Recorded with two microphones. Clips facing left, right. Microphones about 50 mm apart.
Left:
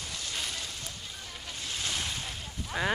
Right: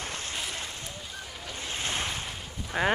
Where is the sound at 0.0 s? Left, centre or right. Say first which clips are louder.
Right 3 dB; right.